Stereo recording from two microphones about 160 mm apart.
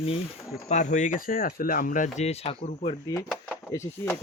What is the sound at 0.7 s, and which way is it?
Speech, 50° left (ahead or behind).